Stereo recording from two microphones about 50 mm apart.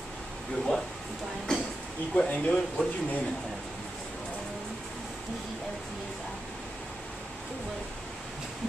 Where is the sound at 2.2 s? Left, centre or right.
Left.